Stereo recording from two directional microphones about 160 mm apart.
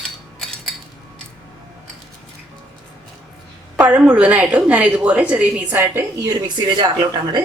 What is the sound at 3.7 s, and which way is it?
A woman's voice, 10° right (ahead or behind).